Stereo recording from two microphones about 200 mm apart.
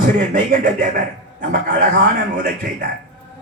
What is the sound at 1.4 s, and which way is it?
Speech, 50° right (ahead or behind).